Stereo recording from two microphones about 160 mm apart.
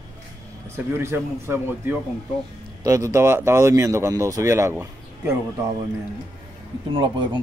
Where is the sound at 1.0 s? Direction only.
15° right (ahead or behind).